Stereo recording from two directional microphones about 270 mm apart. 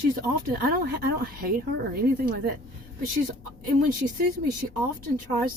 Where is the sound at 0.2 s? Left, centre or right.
Right.